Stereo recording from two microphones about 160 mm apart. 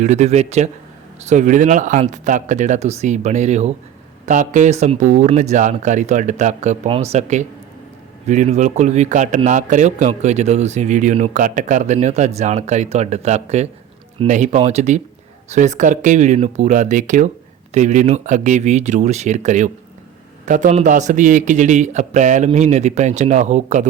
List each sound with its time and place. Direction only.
0.0 s a man's voice: 45° right (ahead or behind)